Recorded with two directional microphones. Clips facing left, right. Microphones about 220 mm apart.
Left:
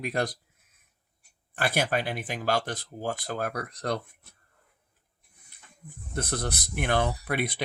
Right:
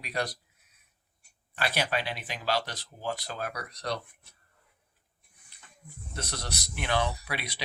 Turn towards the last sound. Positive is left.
turn(degrees=50)  # may be behind; listen again after turning